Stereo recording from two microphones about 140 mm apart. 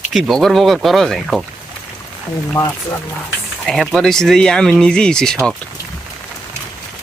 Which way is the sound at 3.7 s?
5° left (ahead or behind).